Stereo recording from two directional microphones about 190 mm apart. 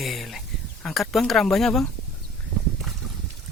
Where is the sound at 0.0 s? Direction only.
Centre (ahead or behind).